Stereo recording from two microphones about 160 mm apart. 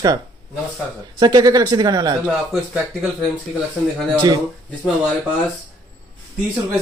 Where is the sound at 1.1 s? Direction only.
25° right (ahead or behind).